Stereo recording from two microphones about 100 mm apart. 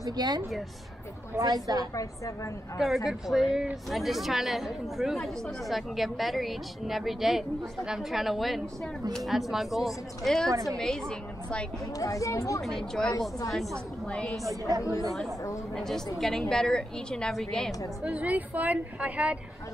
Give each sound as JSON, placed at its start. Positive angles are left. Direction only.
{"t": 0.0, "sound": "a woman's voice", "side_deg": -40}
{"t": 2.0, "sound": "speech", "side_deg": 35}
{"t": 3.1, "sound": "speech", "side_deg": -5}
{"t": 10.5, "sound": "a woman's voice", "side_deg": -35}
{"t": 10.8, "sound": "speech", "side_deg": 5}
{"t": 12.0, "sound": "speech", "side_deg": 35}
{"t": 12.6, "sound": "speech", "side_deg": 5}
{"t": 14.8, "sound": "speech", "side_deg": 30}
{"t": 15.7, "sound": "speech", "side_deg": 5}
{"t": 18.0, "sound": "a woman's voice", "side_deg": -15}